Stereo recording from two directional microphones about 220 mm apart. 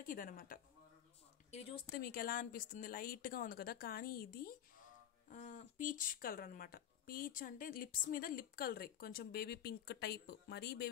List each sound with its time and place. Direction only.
0.0 s speech: 40° left (ahead or behind)
1.5 s speech: 25° left (ahead or behind)
2.0 s speech: 40° left (ahead or behind)